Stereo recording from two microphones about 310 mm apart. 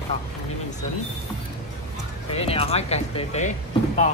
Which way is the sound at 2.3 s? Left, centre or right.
Centre.